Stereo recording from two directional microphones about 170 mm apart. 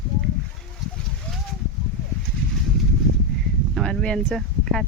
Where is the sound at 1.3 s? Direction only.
5° left (ahead or behind).